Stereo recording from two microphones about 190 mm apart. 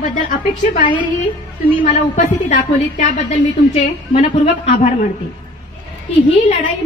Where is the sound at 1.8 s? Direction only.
40° left (ahead or behind).